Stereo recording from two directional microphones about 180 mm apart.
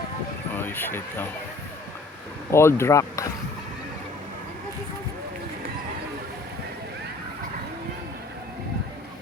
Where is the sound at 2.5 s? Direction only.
15° left (ahead or behind).